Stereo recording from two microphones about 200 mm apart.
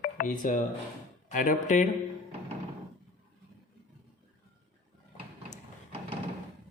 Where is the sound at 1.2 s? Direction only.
40° left (ahead or behind).